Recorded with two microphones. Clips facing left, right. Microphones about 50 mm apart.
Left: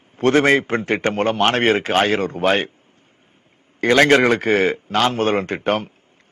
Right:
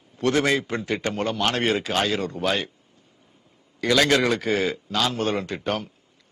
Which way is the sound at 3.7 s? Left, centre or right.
Left.